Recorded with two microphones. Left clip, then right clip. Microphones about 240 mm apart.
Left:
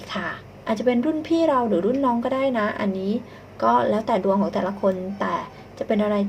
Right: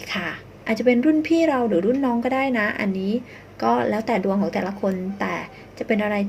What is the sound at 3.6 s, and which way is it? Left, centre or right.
Speech, right.